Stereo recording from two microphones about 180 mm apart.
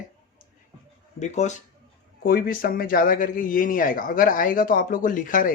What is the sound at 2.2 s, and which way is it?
Speech, 55° left (ahead or behind).